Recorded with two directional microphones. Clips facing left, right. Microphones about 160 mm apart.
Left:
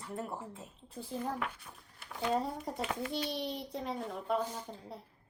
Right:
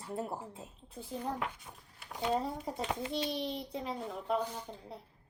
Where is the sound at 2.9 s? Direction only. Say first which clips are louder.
Right 2 dB; 25° right (ahead or behind).